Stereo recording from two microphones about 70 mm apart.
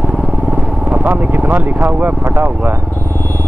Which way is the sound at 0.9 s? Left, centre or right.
Right.